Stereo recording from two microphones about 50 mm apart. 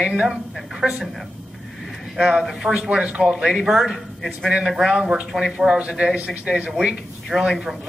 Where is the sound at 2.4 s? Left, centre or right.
Centre.